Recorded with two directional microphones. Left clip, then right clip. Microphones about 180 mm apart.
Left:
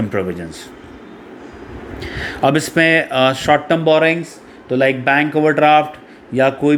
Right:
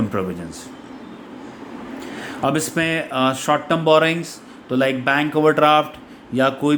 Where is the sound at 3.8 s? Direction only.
5° left (ahead or behind).